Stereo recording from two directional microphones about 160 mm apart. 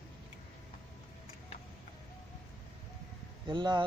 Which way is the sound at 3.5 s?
30° right (ahead or behind).